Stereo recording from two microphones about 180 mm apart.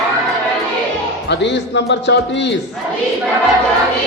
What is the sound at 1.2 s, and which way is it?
Speech, 75° left (ahead or behind).